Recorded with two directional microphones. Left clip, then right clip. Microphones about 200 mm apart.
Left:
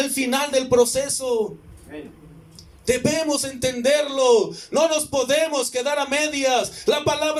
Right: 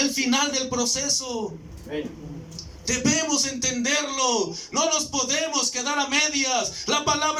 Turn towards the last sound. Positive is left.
turn(degrees=35)  # may be behind; listen again after turning